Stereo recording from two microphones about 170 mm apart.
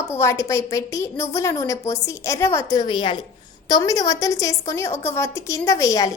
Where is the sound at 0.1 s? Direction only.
15° left (ahead or behind).